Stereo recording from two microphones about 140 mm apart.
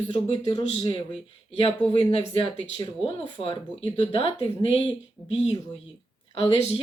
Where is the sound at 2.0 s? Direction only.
35° left (ahead or behind).